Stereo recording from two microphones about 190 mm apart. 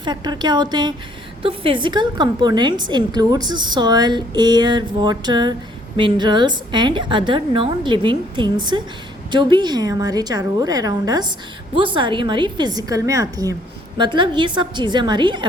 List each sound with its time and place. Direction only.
0.0 s a woman's voice: 25° right (ahead or behind)